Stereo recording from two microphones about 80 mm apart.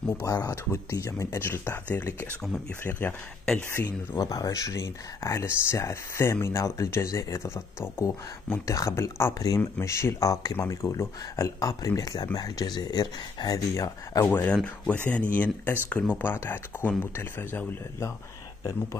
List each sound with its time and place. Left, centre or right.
0.2 s speech: left
1.4 s speech: left
2.8 s speech: left
4.2 s speech: left
14.2 s speech: left
14.5 s speech: centre